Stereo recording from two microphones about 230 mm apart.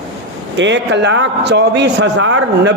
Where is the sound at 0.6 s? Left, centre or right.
Right.